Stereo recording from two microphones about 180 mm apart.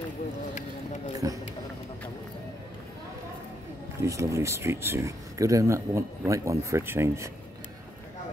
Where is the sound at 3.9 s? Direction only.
15° right (ahead or behind).